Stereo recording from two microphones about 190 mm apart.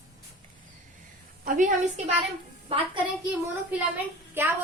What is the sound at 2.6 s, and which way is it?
Speech, 30° right (ahead or behind).